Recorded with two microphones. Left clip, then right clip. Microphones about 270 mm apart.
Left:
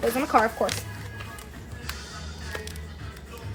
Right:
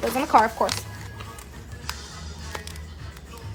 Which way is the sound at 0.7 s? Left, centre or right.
Centre.